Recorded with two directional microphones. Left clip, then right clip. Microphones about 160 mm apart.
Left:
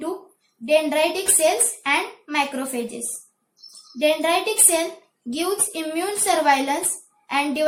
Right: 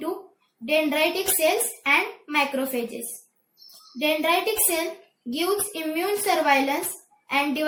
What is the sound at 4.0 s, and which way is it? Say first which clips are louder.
A woman's voice: left 3 dB; 40° left (ahead or behind).